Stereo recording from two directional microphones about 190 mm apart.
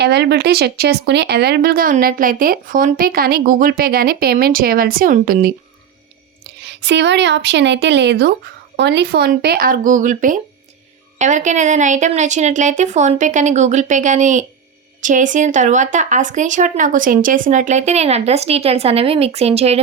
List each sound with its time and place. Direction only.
0.0 s speech: 60° right (ahead or behind)
6.4 s a woman's voice: 65° right (ahead or behind); by 19.8 s 35° right (ahead or behind)